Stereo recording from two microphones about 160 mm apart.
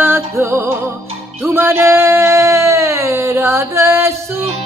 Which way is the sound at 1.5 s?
15° right (ahead or behind).